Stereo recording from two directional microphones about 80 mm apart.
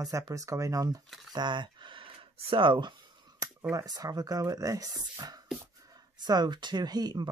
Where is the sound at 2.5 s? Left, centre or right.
Right.